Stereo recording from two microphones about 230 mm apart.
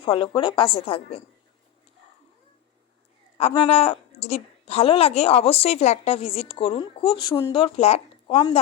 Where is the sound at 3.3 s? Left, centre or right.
Left.